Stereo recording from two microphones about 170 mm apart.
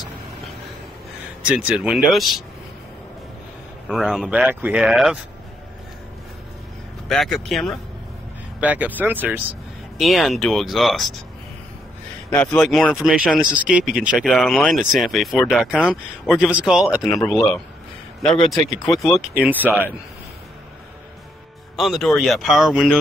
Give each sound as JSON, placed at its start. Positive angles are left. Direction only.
{"t": 1.4, "sound": "speech", "side_deg": -5}
{"t": 3.9, "sound": "speech", "side_deg": -5}
{"t": 7.1, "sound": "speech", "side_deg": 5}
{"t": 12.3, "sound": "speech", "side_deg": 15}
{"t": 12.5, "sound": "speech", "side_deg": 0}
{"t": 18.9, "sound": "speech", "side_deg": 0}
{"t": 19.3, "sound": "speech", "side_deg": -10}
{"t": 21.7, "sound": "speech", "side_deg": 0}